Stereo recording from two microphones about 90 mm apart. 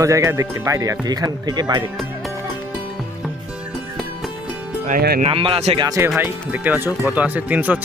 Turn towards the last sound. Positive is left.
turn(degrees=-20)  # may be behind; listen again after turning